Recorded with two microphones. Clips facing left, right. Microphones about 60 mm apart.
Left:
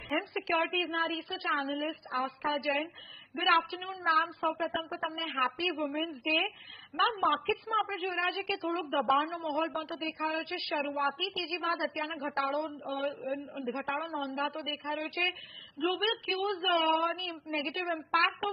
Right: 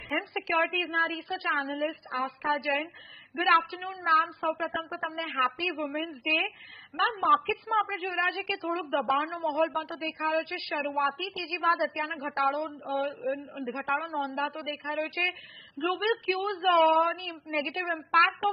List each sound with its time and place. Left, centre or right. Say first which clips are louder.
0.2 s speech: right 5 dB; right